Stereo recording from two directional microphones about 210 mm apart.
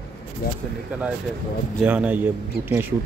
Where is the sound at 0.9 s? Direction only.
5° right (ahead or behind).